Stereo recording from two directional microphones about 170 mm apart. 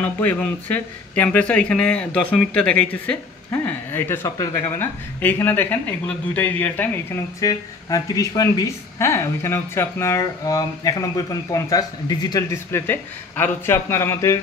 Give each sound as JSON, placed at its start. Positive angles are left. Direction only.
{"t": 0.0, "sound": "a woman's voice", "side_deg": 10}